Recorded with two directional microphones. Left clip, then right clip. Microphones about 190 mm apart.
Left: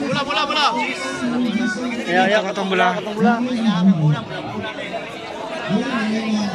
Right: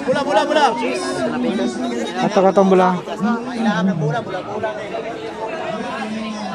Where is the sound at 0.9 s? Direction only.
55° right (ahead or behind).